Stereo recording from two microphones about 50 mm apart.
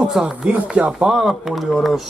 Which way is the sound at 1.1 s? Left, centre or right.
Centre.